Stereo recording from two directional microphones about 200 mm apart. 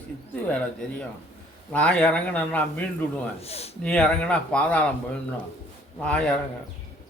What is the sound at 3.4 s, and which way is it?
Speech, 30° left (ahead or behind).